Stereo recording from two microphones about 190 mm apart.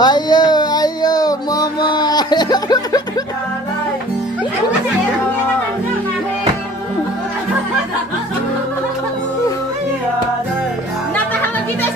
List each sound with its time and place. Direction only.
0.0 s music: 20° left (ahead or behind)